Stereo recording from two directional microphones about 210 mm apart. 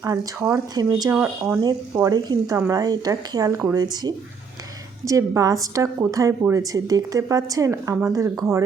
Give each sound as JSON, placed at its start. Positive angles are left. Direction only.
{"t": 0.0, "sound": "a woman's voice", "side_deg": -15}